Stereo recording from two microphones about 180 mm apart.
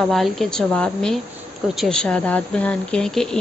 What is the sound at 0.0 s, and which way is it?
A woman's voice, centre (ahead or behind).